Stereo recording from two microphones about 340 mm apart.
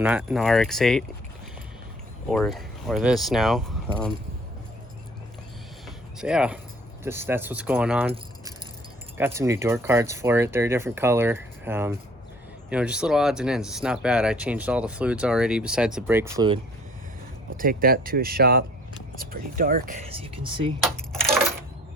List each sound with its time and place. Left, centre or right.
0.0 s speech: centre
2.3 s speech: centre
6.1 s speech: centre
9.1 s speech: centre
17.6 s speech: right
20.8 s coin: centre